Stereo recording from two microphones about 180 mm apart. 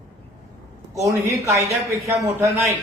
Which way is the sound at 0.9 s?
15° right (ahead or behind).